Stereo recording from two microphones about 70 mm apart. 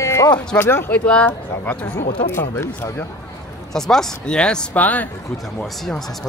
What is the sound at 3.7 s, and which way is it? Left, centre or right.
Speech, centre.